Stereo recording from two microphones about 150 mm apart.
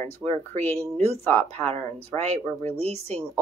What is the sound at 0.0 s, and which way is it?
Speech, 15° left (ahead or behind).